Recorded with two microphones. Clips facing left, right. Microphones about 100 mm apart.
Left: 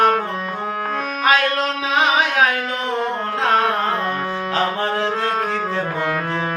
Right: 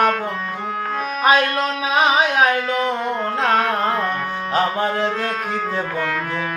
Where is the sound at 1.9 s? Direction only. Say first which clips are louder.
Right 1 dB; 15° right (ahead or behind).